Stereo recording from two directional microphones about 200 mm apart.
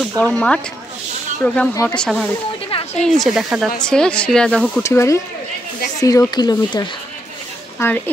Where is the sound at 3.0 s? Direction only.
Centre (ahead or behind).